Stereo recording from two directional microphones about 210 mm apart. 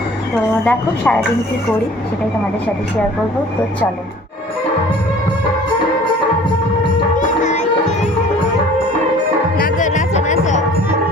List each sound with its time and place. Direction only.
0.7 s a woman's voice: 5° left (ahead or behind)
7.2 s music: 35° left (ahead or behind)
9.6 s music: 40° left (ahead or behind)